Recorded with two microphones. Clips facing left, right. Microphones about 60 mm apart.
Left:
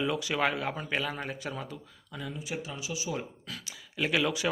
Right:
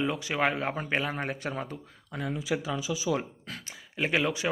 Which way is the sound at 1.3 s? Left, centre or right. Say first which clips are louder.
Right 3 dB; right.